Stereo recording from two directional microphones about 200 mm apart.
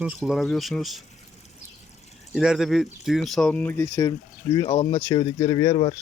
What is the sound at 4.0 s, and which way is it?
Speech, 20° left (ahead or behind).